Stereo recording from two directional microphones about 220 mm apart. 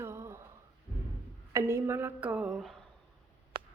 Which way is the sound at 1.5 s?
10° right (ahead or behind).